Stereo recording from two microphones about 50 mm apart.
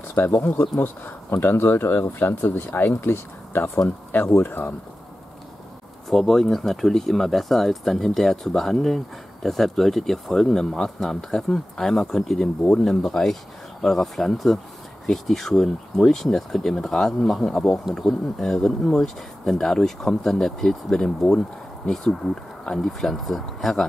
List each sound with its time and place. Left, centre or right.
0.1 s speech: left
6.0 s speech: centre
13.0 s speech: centre